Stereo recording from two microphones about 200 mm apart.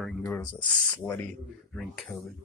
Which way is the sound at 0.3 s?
20° left (ahead or behind).